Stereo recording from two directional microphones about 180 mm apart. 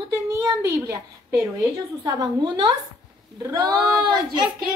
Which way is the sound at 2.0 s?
25° right (ahead or behind).